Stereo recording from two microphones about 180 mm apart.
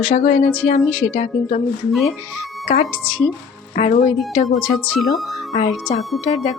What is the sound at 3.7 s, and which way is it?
Speech, 40° left (ahead or behind).